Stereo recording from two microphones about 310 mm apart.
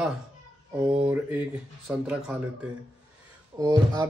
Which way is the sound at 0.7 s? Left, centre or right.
Centre.